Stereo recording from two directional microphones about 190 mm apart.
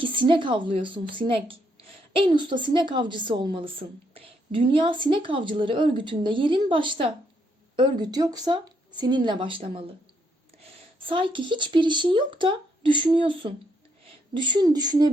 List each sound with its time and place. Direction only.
0.0 s a woman's voice: 25° right (ahead or behind)